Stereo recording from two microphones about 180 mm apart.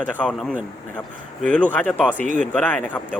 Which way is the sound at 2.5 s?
10° left (ahead or behind).